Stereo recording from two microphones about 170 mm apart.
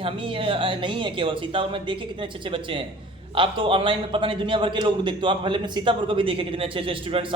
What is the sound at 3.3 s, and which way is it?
A man's voice, 30° right (ahead or behind).